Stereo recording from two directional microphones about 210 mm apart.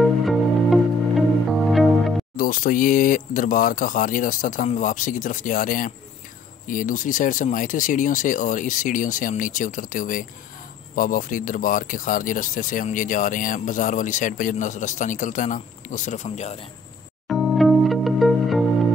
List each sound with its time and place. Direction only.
0.0 s music: centre (ahead or behind)
2.3 s speech: 40° left (ahead or behind)
17.3 s music: centre (ahead or behind)